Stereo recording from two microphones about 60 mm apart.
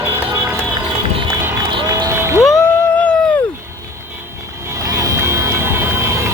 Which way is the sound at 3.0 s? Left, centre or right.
Left.